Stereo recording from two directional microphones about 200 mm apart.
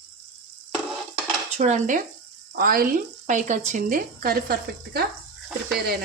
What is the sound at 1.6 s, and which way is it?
Speech, 35° right (ahead or behind).